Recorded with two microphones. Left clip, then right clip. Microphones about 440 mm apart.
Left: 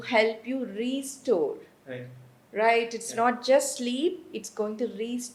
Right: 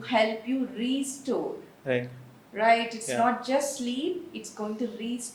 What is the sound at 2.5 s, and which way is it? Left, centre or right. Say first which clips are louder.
A woman's voice: even; left.